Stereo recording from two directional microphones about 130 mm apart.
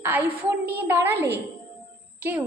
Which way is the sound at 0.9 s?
15° right (ahead or behind).